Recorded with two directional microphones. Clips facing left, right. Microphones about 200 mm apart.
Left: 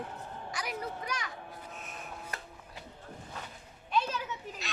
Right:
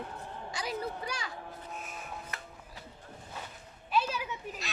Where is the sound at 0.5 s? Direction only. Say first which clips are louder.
Right 2 dB; 30° right (ahead or behind).